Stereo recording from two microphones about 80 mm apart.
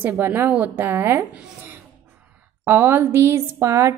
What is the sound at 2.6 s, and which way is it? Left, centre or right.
A woman's voice, right.